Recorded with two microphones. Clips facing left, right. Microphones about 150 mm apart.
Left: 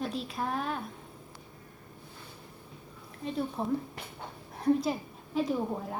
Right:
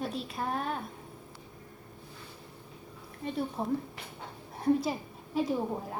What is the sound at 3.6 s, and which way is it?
A woman's voice, 5° right (ahead or behind).